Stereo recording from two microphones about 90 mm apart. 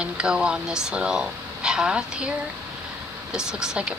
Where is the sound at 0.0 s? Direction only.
10° right (ahead or behind).